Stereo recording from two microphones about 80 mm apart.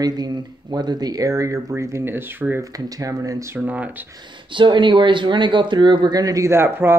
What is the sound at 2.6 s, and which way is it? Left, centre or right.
Speech, right.